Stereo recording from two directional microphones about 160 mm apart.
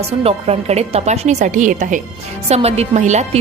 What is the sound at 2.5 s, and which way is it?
Speech, 40° right (ahead or behind).